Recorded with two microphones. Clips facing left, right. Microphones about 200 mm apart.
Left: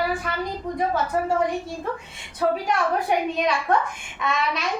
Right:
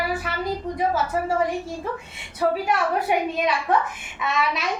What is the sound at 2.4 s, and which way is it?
A child's voice, 5° right (ahead or behind).